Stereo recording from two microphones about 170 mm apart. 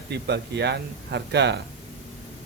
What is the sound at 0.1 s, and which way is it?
Speech, 80° right.